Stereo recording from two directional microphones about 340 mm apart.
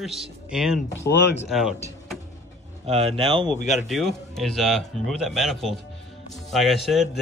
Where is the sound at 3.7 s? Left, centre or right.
Centre.